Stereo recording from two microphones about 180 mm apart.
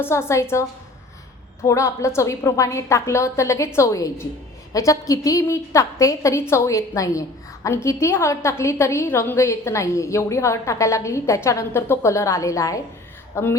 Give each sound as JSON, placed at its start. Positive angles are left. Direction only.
{"t": 0.0, "sound": "a woman's voice", "side_deg": 15}
{"t": 1.6, "sound": "a woman's voice", "side_deg": 15}